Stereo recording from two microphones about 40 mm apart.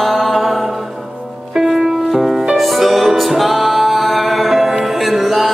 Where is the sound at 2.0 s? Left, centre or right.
Centre.